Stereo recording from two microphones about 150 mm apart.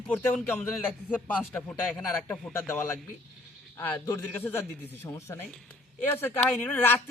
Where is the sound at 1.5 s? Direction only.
5° left (ahead or behind).